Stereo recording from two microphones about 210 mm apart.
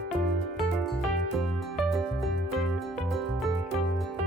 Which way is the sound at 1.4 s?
Centre (ahead or behind).